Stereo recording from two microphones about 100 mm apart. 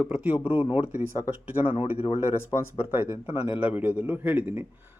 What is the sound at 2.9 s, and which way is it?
Speech, 20° right (ahead or behind).